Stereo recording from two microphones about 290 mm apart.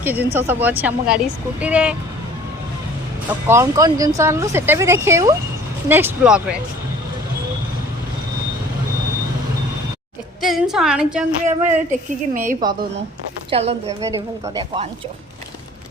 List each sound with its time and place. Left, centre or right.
0.0 s speech: centre
3.2 s speech: centre
10.4 s speech: centre
11.9 s a woman's voice: right
13.5 s a woman's voice: right